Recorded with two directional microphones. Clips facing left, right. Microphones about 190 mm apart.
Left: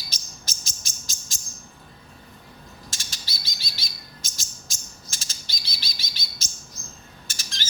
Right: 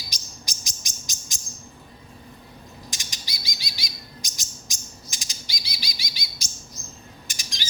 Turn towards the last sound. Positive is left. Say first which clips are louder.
# right 1 dB
turn(degrees=-15)  # may be behind; listen again after turning